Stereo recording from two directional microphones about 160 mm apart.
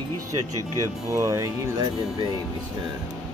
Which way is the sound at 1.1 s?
20° right (ahead or behind).